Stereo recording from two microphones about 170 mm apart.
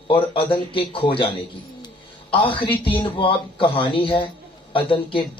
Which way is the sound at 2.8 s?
30° left (ahead or behind).